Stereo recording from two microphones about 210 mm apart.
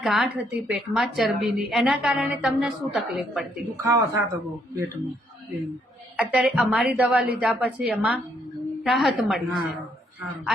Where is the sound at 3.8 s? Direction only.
15° right (ahead or behind).